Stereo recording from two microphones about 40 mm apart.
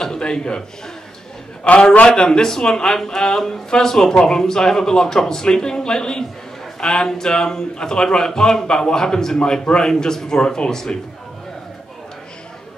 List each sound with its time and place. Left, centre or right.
0.0 s a man's voice: centre